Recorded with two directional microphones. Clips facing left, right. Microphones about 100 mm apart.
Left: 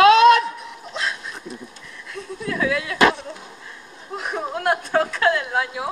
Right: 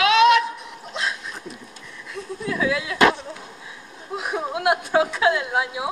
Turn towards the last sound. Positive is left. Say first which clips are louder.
# even
turn(degrees=-5)  # may be behind; listen again after turning